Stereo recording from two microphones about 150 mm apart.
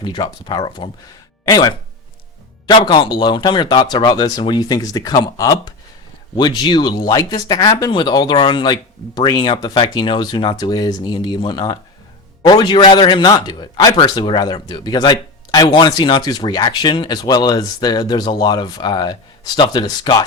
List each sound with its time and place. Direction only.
0.0 s a man's voice: 30° left (ahead or behind)